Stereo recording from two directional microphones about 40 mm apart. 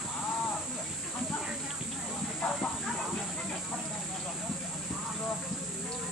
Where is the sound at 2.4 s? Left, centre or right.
Left.